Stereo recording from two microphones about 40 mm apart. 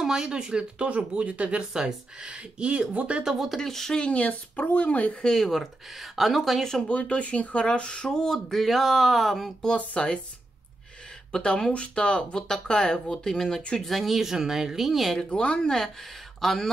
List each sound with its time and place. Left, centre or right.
0.0 s speech: centre; by 1.6 s right
1.6 s speech: centre
2.3 s speech: right
3.4 s speech: centre
4.0 s speech: left
5.2 s speech: centre
5.5 s speech: centre
6.9 s speech: left
8.5 s speech: centre
9.9 s speech: left
11.3 s speech: centre
13.3 s speech: centre
15.3 s speech: left
16.3 s speech: centre